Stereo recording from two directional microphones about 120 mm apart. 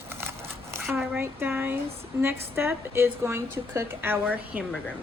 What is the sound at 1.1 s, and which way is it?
A woman's voice, 20° right (ahead or behind).